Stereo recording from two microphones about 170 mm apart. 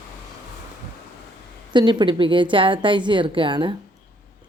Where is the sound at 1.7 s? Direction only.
25° right (ahead or behind).